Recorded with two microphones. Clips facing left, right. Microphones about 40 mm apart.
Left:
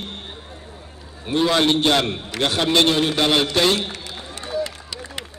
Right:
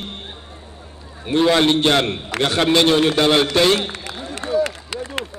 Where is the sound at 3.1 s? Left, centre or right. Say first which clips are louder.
Right 3 dB; centre.